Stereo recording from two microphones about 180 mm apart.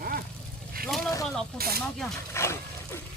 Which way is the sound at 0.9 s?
Centre (ahead or behind).